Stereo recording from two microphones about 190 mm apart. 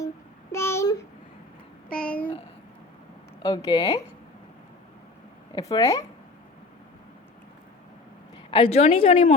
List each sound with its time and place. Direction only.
0.5 s a sound: 15° left (ahead or behind)
3.4 s speech: 20° left (ahead or behind)
5.5 s speech: 20° left (ahead or behind)
8.4 s a woman's voice: 25° left (ahead or behind)